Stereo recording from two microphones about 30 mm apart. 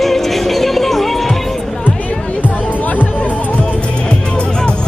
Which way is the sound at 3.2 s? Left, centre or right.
Left.